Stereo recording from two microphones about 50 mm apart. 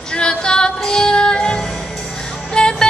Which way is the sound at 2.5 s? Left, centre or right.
Centre.